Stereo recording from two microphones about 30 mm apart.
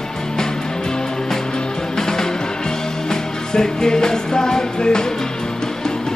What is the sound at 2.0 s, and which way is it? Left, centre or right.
Music, centre.